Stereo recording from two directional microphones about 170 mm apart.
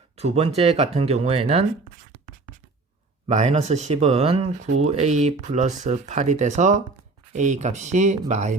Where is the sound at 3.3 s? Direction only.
40° right (ahead or behind).